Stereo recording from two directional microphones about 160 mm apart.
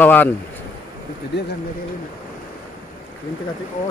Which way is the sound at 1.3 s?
90° left.